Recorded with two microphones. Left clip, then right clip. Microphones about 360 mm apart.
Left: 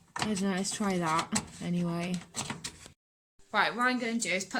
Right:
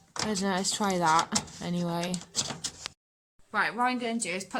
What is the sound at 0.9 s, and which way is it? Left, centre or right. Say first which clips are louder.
Speech: right 6 dB; right.